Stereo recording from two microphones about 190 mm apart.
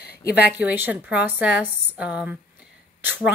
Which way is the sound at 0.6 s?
10° right (ahead or behind).